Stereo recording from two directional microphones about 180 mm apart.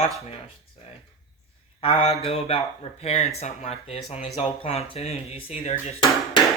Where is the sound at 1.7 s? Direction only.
35° left (ahead or behind).